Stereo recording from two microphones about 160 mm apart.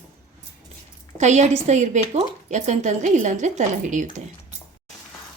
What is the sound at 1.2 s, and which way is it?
A woman's voice, 45° right (ahead or behind).